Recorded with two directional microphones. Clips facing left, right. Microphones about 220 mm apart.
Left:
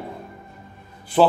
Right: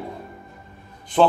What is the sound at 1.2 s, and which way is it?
Speech, 5° left (ahead or behind).